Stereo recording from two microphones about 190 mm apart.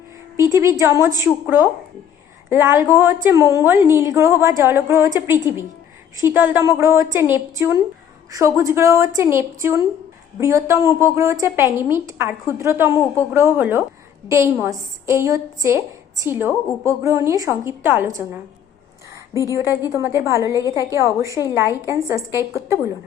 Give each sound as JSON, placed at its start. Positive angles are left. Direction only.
{"t": 0.8, "sound": "a woman's voice", "side_deg": -15}
{"t": 2.5, "sound": "a woman's voice", "side_deg": -10}